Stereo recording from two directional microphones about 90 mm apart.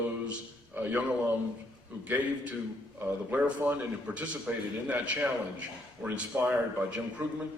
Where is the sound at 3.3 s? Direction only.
15° right (ahead or behind).